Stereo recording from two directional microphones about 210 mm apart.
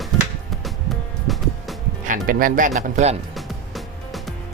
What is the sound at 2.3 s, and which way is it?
Speech, 40° right (ahead or behind).